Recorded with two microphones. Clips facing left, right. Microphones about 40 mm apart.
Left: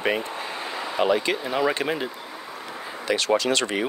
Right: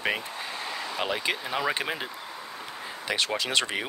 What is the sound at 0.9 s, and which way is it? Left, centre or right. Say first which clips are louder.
Speech: left 8 dB; centre.